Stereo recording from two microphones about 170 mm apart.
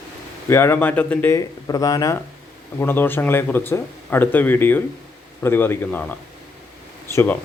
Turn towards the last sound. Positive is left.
turn(degrees=10)  # may be behind; listen again after turning